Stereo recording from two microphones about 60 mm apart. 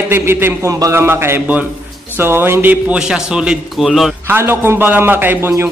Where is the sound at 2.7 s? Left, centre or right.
Centre.